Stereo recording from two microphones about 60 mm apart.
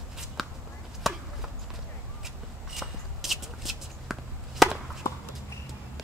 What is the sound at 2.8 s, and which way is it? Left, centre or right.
Shuffle, centre.